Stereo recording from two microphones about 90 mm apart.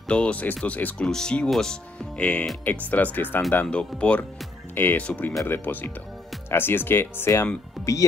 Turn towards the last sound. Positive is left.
turn(degrees=0)  # may be behind; listen again after turning